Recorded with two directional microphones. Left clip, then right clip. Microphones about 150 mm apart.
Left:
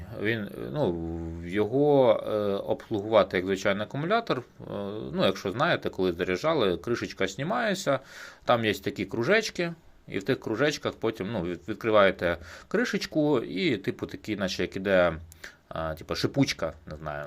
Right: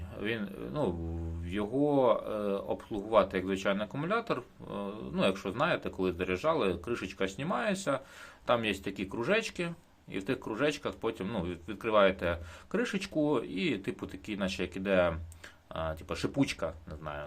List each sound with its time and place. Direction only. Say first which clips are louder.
0.2 s speech: left 6 dB; 35° left (ahead or behind)